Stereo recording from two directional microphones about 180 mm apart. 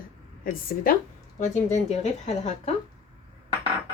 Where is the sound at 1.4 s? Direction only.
40° left (ahead or behind).